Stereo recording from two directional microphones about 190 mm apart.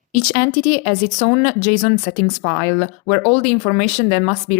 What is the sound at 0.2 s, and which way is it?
A woman's voice, 40° left (ahead or behind).